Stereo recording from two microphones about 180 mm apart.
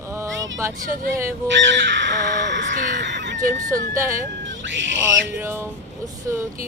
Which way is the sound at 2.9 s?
75° right (ahead or behind).